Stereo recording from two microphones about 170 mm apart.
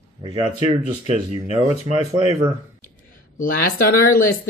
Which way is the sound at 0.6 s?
35° right (ahead or behind).